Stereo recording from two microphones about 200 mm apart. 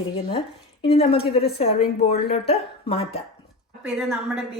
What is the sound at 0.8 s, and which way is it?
A woman's voice, 30° left (ahead or behind).